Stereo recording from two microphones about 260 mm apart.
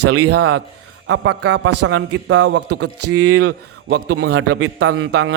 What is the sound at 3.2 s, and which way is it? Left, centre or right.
A man's voice, right.